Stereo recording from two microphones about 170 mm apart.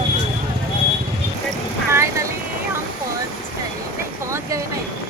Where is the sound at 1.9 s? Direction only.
15° right (ahead or behind).